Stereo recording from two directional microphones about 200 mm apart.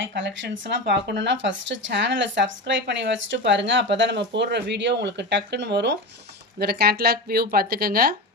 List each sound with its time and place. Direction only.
0.0 s speech: 65° right (ahead or behind); by 8.0 s 50° right (ahead or behind)